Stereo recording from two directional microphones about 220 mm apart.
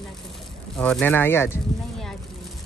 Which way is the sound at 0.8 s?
5° left (ahead or behind).